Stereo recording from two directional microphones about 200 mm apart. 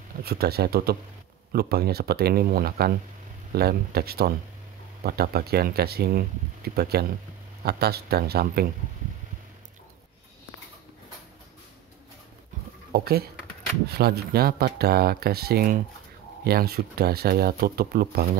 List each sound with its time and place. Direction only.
0.2 s speech: 50° right (ahead or behind)
12.9 s speech: 50° right (ahead or behind)